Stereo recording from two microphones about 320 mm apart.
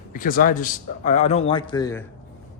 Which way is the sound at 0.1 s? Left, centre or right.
Left.